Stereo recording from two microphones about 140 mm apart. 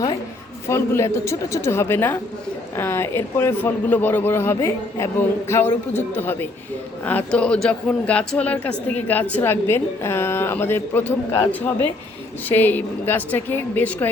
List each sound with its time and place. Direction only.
0.7 s a woman's voice: 20° left (ahead or behind)